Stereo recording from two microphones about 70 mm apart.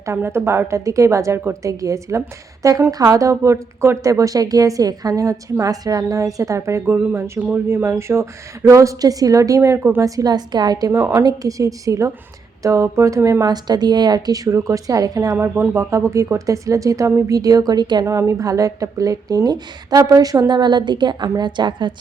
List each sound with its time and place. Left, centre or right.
0.2 s a woman's voice: right
5.7 s a woman's voice: right
6.9 s a woman's voice: right
9.6 s speech: right
10.0 s a woman's voice: right
11.2 s a woman's voice: right
13.4 s a woman's voice: right
15.4 s speech: right
15.8 s a woman's voice: right
18.0 s a woman's voice: right
20.5 s a woman's voice: right